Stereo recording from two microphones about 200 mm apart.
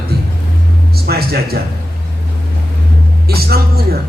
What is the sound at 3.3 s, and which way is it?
Speech, 50° right (ahead or behind).